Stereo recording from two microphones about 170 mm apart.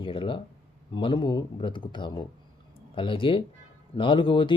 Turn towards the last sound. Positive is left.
turn(degrees=30)  # may be behind; listen again after turning